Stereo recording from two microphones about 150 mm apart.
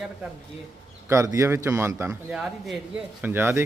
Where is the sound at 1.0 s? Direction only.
20° right (ahead or behind).